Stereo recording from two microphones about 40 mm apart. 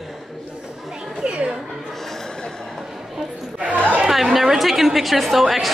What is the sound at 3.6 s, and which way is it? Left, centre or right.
Speech, right.